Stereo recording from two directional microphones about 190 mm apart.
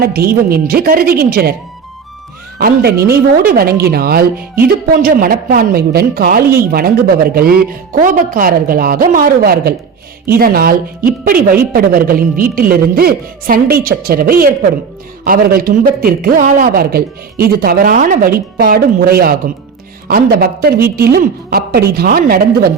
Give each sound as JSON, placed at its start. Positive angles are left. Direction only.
{"t": 0.0, "sound": "a woman's voice", "side_deg": -55}
{"t": 2.6, "sound": "a woman's voice", "side_deg": -50}